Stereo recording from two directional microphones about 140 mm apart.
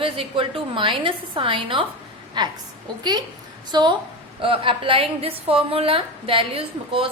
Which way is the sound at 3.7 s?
30° right (ahead or behind).